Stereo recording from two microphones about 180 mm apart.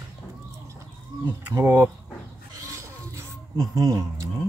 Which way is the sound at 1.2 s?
15° right (ahead or behind).